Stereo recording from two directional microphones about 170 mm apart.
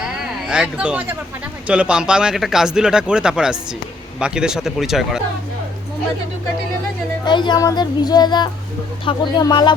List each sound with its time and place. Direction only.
0.0 s a sound: 5° right (ahead or behind)
1.6 s speech: 5° right (ahead or behind)
7.3 s speech: 25° left (ahead or behind)